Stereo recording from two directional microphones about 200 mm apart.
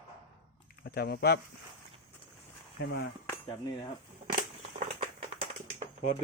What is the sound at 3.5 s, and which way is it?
Speech, 25° left (ahead or behind).